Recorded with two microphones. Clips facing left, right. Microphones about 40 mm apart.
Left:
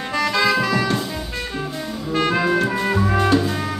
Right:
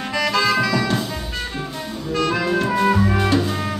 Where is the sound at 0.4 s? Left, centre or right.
Left.